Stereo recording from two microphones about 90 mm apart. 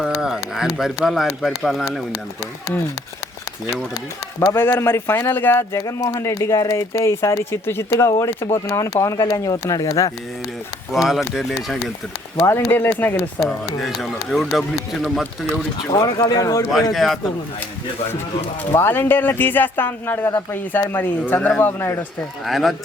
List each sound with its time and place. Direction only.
0.0 s speech: 5° right (ahead or behind)
4.4 s speech: 25° left (ahead or behind)
5.7 s speech: 40° left (ahead or behind)
9.1 s speech: 50° left (ahead or behind)
10.9 s speech: 5° right (ahead or behind)
12.5 s speech: 25° left (ahead or behind)
13.4 s speech: centre (ahead or behind)
16.0 s speech: 40° left (ahead or behind)
16.9 s speech: centre (ahead or behind)
18.7 s speech: 25° left (ahead or behind)
22.4 s speech: centre (ahead or behind)